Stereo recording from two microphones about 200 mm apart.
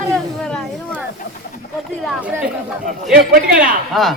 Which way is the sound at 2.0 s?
5° right (ahead or behind).